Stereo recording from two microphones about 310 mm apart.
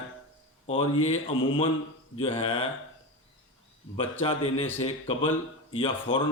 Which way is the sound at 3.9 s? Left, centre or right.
Centre.